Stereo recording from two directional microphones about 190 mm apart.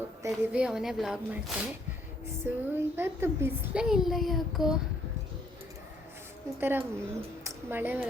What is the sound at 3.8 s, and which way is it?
Speech, centre (ahead or behind).